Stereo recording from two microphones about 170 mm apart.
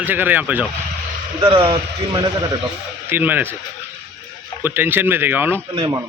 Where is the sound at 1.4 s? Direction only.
30° right (ahead or behind).